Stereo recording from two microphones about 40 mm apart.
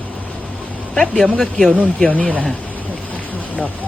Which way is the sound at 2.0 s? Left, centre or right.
Left.